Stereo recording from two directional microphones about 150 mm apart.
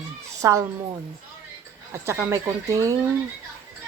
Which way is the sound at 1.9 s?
20° right (ahead or behind).